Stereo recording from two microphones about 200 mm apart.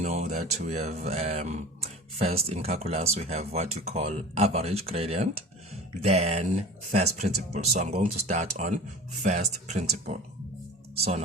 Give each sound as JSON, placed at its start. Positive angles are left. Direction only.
{"t": 0.0, "sound": "speech", "side_deg": -35}